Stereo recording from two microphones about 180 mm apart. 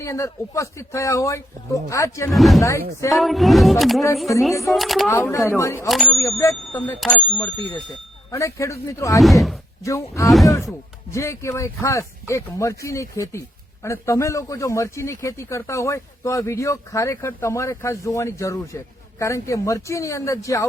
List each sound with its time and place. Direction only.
0.0 s speech: 15° left (ahead or behind)
2.3 s speech: centre (ahead or behind)
5.0 s speech: 15° left (ahead or behind)
9.2 s speech: centre (ahead or behind)
9.8 s speech: 15° left (ahead or behind)
10.2 s speech: centre (ahead or behind)
11.1 s speech: 15° left (ahead or behind)